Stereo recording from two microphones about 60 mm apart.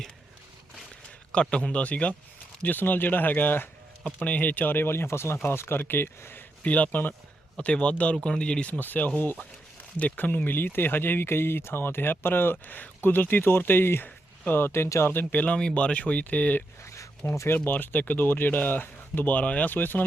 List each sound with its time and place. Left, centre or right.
1.3 s speech: centre; by 6.4 s left
6.6 s speech: left
7.5 s speech: centre
8.8 s speech: left
15.1 s speech: left
16.8 s a sound: left
17.7 s speech: left